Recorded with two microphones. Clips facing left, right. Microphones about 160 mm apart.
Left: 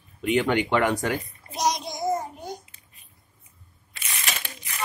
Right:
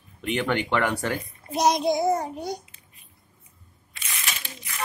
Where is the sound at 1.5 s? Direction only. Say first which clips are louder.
Right 6 dB; 60° right (ahead or behind); by 2.5 s 80° right.